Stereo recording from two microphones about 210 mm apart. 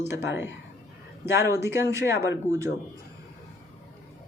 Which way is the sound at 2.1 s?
55° left (ahead or behind).